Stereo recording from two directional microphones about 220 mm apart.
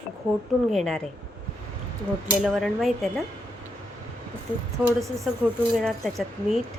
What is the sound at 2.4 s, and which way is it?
Speech, centre (ahead or behind).